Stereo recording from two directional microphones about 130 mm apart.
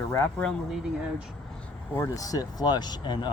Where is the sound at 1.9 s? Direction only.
25° left (ahead or behind).